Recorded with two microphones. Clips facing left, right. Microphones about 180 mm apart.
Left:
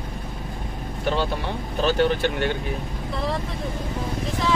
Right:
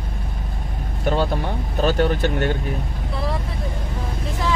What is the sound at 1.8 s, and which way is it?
Speech, 45° right (ahead or behind).